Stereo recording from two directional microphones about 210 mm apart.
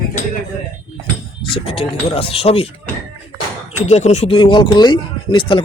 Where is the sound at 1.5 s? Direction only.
25° left (ahead or behind).